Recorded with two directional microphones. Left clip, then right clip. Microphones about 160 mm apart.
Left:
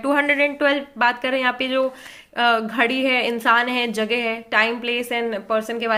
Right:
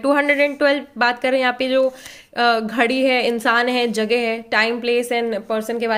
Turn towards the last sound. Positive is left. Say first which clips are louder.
# right 1 dB
turn(degrees=-30)  # may be behind; listen again after turning